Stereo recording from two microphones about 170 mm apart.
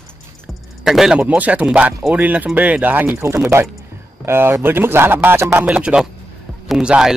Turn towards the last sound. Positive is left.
turn(degrees=-5)  # may be behind; listen again after turning